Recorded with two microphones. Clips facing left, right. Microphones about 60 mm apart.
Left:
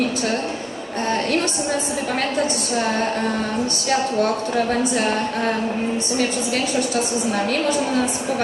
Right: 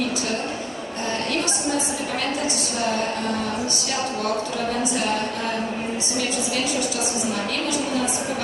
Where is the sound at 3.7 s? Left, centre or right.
Left.